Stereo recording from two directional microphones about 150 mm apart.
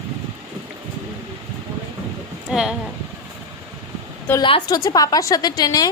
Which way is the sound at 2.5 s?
5° right (ahead or behind).